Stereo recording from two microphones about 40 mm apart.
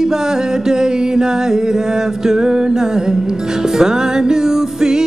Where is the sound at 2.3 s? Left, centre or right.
Centre.